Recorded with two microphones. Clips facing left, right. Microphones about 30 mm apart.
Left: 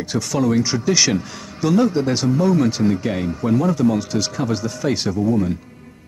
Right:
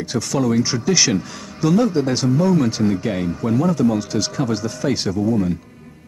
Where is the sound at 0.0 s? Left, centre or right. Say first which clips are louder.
Even; centre.